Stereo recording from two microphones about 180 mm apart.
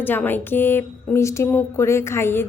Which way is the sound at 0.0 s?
10° left (ahead or behind).